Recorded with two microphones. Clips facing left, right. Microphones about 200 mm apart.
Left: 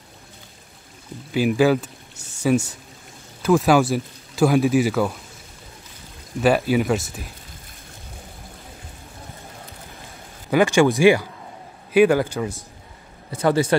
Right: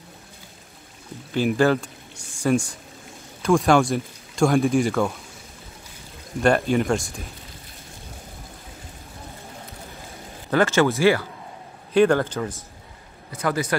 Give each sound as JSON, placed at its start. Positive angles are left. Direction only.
{"t": 1.3, "sound": "speech", "side_deg": 5}
{"t": 6.4, "sound": "speech", "side_deg": 5}
{"t": 10.5, "sound": "speech", "side_deg": 15}
{"t": 13.3, "sound": "a man's voice", "side_deg": 30}